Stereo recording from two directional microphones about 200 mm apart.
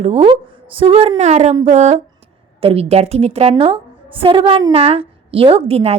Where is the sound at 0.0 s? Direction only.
30° right (ahead or behind).